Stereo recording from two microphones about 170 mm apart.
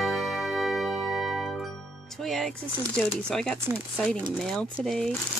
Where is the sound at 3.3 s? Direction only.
5° left (ahead or behind).